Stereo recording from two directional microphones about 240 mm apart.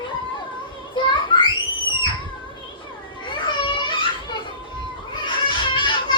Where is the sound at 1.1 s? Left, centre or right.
Left.